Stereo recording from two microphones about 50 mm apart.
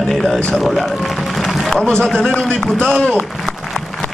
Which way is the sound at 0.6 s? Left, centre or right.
Centre.